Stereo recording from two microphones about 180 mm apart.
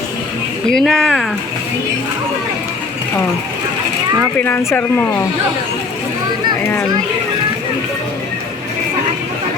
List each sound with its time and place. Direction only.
0.7 s speech: 5° left (ahead or behind)
4.4 s speech: 10° left (ahead or behind)